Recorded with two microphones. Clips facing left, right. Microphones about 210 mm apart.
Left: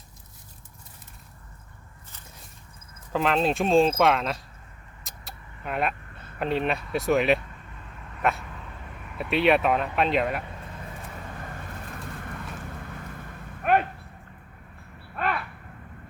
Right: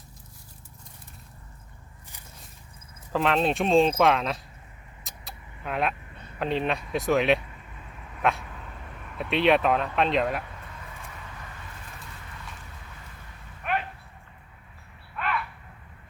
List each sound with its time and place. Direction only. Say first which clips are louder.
3.1 s speech: even; centre (ahead or behind)
5.0 s vehicle: even; centre (ahead or behind)
6.4 s speech: left 1 dB; centre (ahead or behind)
8.0 s dog: even; centre (ahead or behind)
9.1 s speech: even; 5° left (ahead or behind)
11.2 s vehicle: left 6 dB; 45° left (ahead or behind)
12.5 s a sound: left 9 dB; 55° left (ahead or behind)
15.1 s a sound: left 3 dB; 45° left (ahead or behind)